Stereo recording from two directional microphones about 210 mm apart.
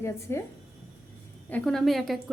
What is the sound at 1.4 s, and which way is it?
Speech, 5° left (ahead or behind).